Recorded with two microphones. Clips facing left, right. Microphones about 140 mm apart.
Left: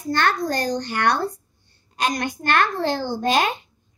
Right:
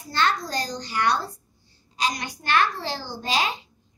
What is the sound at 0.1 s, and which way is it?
A child's voice, 55° left (ahead or behind).